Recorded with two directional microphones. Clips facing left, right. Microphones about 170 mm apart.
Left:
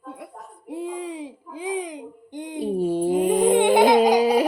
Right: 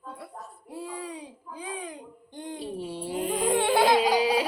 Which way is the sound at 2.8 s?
45° left (ahead or behind).